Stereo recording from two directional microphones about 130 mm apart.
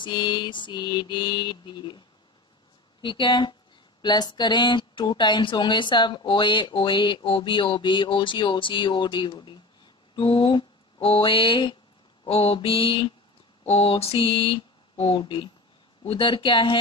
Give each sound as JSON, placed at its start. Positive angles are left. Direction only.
{"t": 0.0, "sound": "speech", "side_deg": 35}
{"t": 3.0, "sound": "speech", "side_deg": 40}
{"t": 12.3, "sound": "a sound", "side_deg": 45}
{"t": 16.1, "sound": "speech", "side_deg": 40}